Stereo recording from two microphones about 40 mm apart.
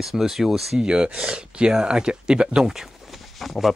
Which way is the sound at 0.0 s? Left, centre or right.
Centre.